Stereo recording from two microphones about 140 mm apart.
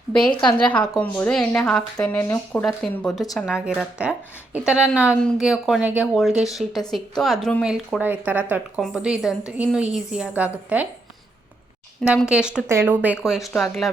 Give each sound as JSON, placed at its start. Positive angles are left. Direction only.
{"t": 0.2, "sound": "a woman's voice", "side_deg": 35}
{"t": 0.6, "sound": "speech", "side_deg": 10}
{"t": 2.5, "sound": "speech", "side_deg": 5}
{"t": 3.8, "sound": "a woman's voice", "side_deg": -10}
{"t": 12.0, "sound": "speech", "side_deg": -5}
{"t": 12.6, "sound": "a woman's voice", "side_deg": -15}
{"t": 13.6, "sound": "speech", "side_deg": 0}